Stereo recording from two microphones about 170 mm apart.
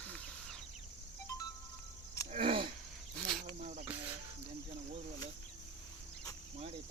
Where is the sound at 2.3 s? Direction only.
35° right (ahead or behind).